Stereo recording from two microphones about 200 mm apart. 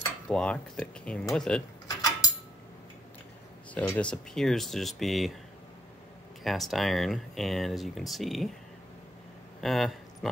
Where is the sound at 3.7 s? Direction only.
5° left (ahead or behind).